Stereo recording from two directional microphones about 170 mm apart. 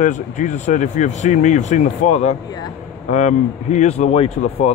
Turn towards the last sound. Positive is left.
turn(degrees=40)  # may be behind; listen again after turning